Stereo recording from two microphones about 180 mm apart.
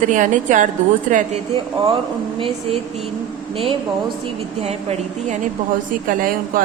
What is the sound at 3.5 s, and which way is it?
Speech, 30° right (ahead or behind).